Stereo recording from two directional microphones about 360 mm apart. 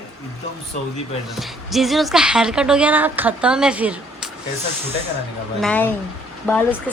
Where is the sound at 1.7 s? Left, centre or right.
Centre.